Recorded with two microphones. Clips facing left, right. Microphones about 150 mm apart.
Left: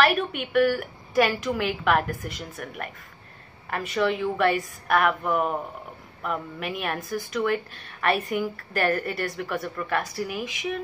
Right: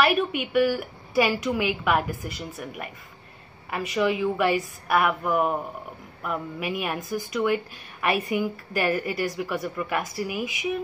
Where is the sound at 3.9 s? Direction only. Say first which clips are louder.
Right 1 dB; 5° right (ahead or behind).